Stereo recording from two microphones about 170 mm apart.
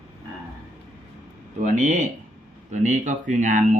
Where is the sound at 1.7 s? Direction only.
45° right (ahead or behind).